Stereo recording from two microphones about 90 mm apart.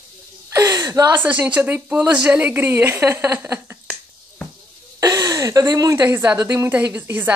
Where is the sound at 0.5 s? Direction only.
35° right (ahead or behind).